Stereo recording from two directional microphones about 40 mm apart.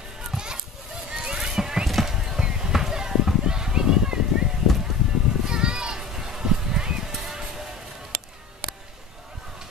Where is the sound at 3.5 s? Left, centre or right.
Centre.